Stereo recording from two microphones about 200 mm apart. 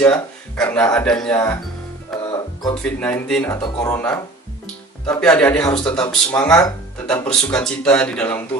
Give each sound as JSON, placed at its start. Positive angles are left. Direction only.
{"t": 0.0, "sound": "speech", "side_deg": 5}
{"t": 2.1, "sound": "music", "side_deg": 0}
{"t": 2.8, "sound": "speech", "side_deg": 5}
{"t": 3.5, "sound": "speech", "side_deg": 15}
{"t": 4.6, "sound": "speech", "side_deg": 5}
{"t": 6.6, "sound": "speech", "side_deg": 15}
{"t": 7.3, "sound": "speech", "side_deg": 5}